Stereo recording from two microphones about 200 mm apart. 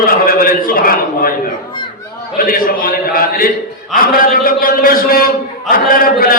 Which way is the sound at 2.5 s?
45° left (ahead or behind).